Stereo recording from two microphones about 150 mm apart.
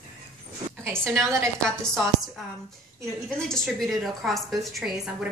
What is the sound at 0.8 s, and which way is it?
Speech, 20° right (ahead or behind).